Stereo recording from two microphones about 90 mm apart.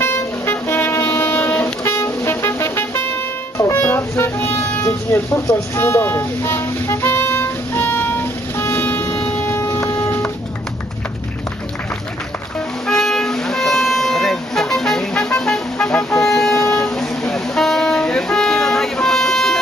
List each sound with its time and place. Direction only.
0.0 s vehicle: 25° left (ahead or behind)
4.9 s a sound: 30° left (ahead or behind)
9.1 s train: 20° left (ahead or behind)
9.6 s a sound: 30° left (ahead or behind)
12.5 s music: 5° left (ahead or behind)
15.4 s vehicle: 10° left (ahead or behind)